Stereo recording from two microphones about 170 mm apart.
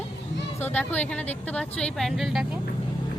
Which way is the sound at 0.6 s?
10° left (ahead or behind).